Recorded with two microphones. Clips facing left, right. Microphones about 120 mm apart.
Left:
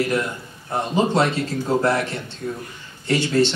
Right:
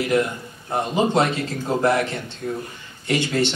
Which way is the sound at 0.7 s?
15° right (ahead or behind).